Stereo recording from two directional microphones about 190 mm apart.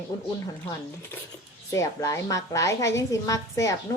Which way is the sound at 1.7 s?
15° left (ahead or behind).